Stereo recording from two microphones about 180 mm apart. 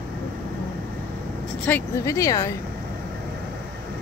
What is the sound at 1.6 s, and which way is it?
Speech, 15° left (ahead or behind).